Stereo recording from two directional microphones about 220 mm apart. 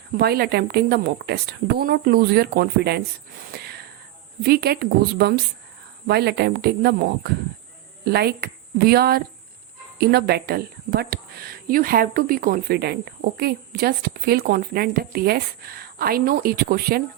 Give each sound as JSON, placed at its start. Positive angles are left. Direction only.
{"t": 0.1, "sound": "speech", "side_deg": -45}
{"t": 3.5, "sound": "a sound", "side_deg": -45}
{"t": 4.4, "sound": "a woman's voice", "side_deg": -45}